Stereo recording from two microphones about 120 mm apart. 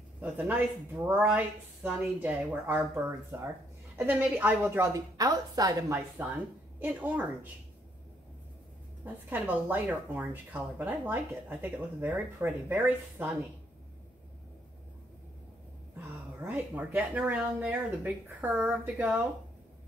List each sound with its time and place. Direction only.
0.2 s speech: 10° right (ahead or behind)
4.9 s speech: 30° right (ahead or behind)
6.2 s speech: 15° right (ahead or behind)
9.0 s speech: 15° right (ahead or behind)
16.4 s speech: 15° right (ahead or behind)